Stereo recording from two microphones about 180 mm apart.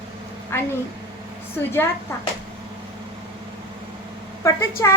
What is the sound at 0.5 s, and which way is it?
A woman's voice, 15° left (ahead or behind).